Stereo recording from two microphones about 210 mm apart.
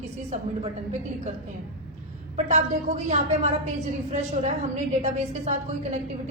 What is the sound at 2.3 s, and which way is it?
A woman's voice, 35° right (ahead or behind).